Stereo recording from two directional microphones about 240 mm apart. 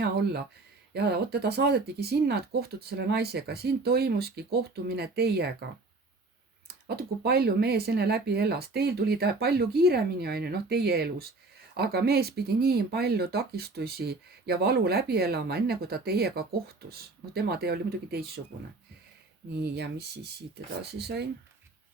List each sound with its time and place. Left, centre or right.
0.0 s speech: right
6.8 s speech: right
19.6 s speech: right
21.0 s speech: right